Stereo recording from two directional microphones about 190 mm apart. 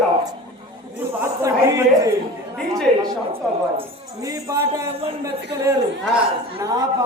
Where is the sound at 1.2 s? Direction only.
15° right (ahead or behind).